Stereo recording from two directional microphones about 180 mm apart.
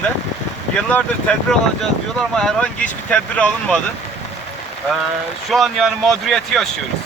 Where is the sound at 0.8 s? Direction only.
5° left (ahead or behind).